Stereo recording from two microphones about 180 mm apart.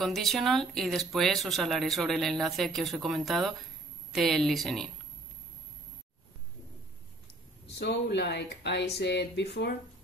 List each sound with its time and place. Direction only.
0.0 s speech: centre (ahead or behind)
7.8 s speech: 70° left (ahead or behind)